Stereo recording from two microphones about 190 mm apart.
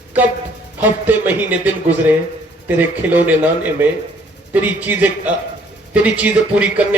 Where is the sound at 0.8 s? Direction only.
10° right (ahead or behind).